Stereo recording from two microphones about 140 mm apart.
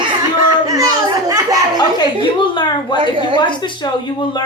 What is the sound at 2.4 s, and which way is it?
Speech, 35° left (ahead or behind).